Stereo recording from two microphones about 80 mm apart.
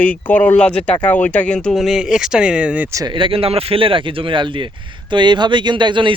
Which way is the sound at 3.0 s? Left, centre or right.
Right.